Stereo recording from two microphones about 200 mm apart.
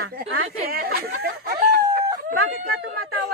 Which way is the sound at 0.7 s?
50° right (ahead or behind).